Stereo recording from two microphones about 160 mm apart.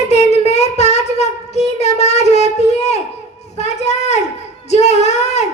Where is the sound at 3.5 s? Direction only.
45° left (ahead or behind).